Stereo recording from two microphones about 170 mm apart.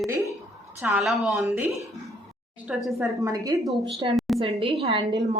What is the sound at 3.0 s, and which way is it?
Speech, 20° right (ahead or behind).